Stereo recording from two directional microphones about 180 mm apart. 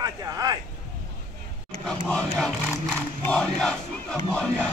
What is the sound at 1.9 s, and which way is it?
Crowd, 5° left (ahead or behind).